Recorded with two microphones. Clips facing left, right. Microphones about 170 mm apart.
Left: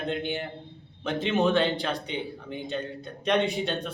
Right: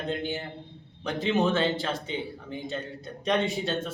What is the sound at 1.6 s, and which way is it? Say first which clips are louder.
Speech: left 2 dB; 15° left (ahead or behind).